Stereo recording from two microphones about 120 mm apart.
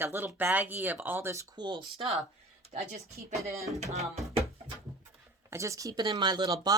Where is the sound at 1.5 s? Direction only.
40° right (ahead or behind).